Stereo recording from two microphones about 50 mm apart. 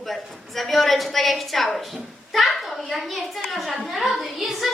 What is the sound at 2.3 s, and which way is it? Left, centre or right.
Hands, centre.